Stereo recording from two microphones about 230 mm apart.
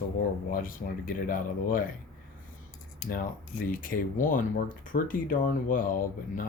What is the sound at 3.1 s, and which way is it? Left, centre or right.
Speech, left.